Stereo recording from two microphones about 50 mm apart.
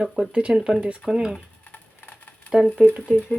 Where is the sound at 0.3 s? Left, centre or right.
Right.